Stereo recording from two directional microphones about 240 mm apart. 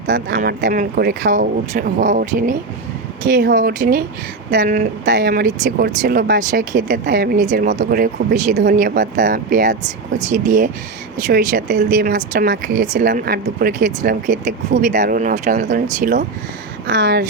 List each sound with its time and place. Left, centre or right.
0.1 s speech: right
16.8 s speech: right